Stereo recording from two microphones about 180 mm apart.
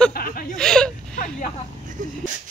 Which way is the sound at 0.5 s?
5° left (ahead or behind).